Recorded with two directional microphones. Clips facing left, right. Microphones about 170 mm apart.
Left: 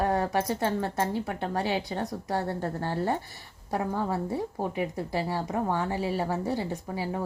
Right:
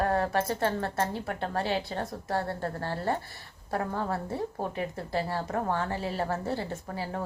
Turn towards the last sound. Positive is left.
turn(degrees=15)  # may be behind; listen again after turning